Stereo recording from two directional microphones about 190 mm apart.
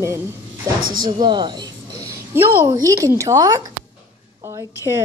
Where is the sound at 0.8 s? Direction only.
50° right (ahead or behind).